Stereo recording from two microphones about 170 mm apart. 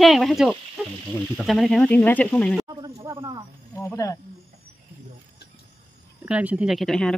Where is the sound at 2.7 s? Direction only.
25° right (ahead or behind).